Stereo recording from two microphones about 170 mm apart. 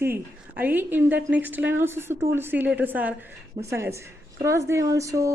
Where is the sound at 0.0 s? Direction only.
10° right (ahead or behind).